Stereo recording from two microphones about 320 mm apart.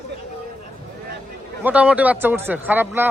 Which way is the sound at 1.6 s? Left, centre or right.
Centre.